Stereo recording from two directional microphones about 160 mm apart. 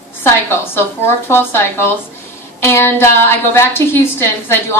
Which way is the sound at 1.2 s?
15° left (ahead or behind).